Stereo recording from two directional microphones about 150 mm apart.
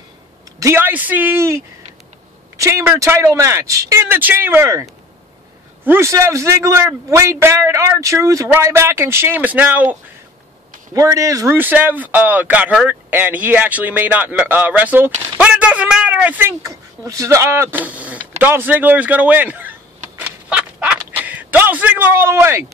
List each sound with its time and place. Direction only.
0.6 s a man's voice: 15° right (ahead or behind)
5.9 s a man's voice: 20° right (ahead or behind)
10.9 s a man's voice: 20° right (ahead or behind)
20.2 s fowl: 10° right (ahead or behind)
21.2 s speech: 10° right (ahead or behind)